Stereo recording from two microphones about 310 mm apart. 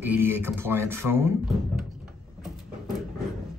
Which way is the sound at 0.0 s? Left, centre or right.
Centre.